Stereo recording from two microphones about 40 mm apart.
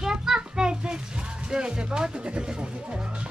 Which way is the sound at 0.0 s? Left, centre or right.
Centre.